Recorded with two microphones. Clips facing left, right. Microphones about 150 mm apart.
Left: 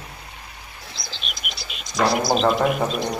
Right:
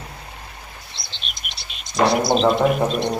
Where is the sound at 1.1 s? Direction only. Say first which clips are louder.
Left 2 dB; centre (ahead or behind).